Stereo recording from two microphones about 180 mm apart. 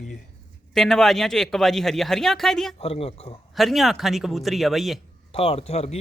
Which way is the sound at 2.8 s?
35° left (ahead or behind).